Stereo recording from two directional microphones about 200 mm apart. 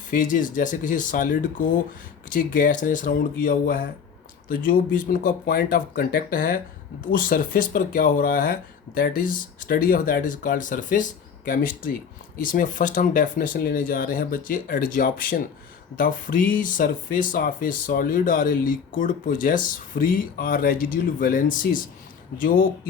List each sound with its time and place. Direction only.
0.1 s speech: 40° left (ahead or behind)